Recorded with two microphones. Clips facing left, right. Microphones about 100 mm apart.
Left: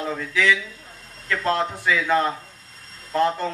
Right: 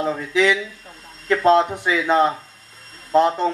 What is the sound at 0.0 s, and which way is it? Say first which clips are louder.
Speech: right 4 dB; 20° right (ahead or behind).